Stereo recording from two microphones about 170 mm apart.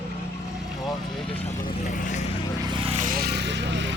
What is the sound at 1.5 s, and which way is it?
Vehicle, 50° left (ahead or behind).